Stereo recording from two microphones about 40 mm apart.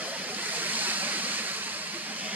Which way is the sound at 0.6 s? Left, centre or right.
Right.